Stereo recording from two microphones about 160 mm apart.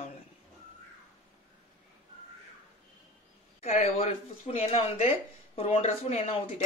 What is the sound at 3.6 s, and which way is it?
Speech, 45° left (ahead or behind).